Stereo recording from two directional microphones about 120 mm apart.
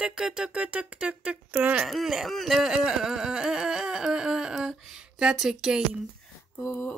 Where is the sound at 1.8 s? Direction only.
Centre (ahead or behind).